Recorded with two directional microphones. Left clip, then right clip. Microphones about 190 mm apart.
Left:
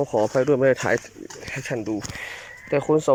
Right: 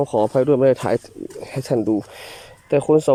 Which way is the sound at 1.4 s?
25° right (ahead or behind).